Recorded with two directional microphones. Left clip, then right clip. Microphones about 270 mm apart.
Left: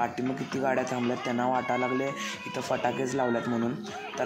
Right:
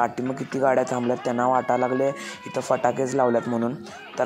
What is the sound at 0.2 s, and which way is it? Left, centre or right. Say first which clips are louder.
Speech: right 6 dB; right.